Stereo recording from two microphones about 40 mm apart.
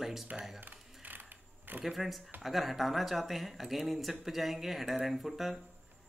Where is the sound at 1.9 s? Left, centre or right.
Centre.